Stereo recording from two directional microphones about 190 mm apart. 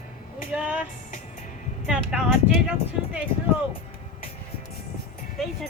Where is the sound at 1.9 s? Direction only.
5° right (ahead or behind).